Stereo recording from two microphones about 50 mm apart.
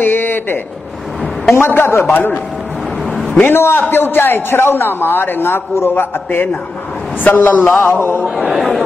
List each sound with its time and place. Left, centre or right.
0.0 s a sound: left
1.5 s a man's voice: left
2.1 s a man's voice: left
3.4 s a man's voice: left
8.5 s a man's voice: centre